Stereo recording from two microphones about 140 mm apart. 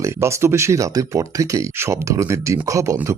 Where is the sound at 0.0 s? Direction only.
20° right (ahead or behind).